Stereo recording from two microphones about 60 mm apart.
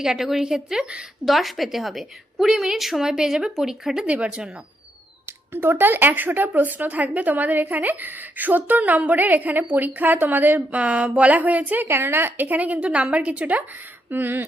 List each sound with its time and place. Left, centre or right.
0.0 s a woman's voice: centre
1.2 s a woman's voice: centre
4.0 s a woman's voice: right
5.2 s speech: right
10.8 s a woman's voice: right
11.9 s speech: right
12.5 s a woman's voice: right
13.7 s speech: right